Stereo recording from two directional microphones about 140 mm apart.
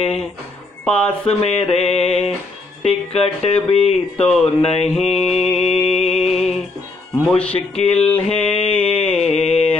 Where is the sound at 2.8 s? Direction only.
45° left (ahead or behind).